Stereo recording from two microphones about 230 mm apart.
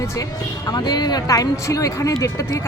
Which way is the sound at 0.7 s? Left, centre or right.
Centre.